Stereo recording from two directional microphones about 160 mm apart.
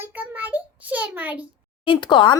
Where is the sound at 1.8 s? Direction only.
30° left (ahead or behind).